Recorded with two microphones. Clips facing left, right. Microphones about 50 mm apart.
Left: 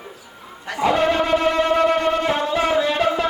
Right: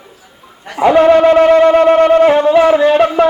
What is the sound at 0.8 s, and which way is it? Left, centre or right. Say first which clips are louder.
Wind instrument: right 11 dB; right.